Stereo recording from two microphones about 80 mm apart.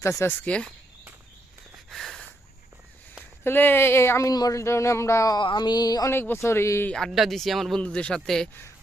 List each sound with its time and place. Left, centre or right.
0.3 s a man's voice: centre
1.9 s a sound: centre
3.4 s speech: left
4.3 s speech: left
4.6 s speech: left
5.4 s a sound: left
6.1 s speech: left
7.1 s speech: centre
7.8 s a man's voice: centre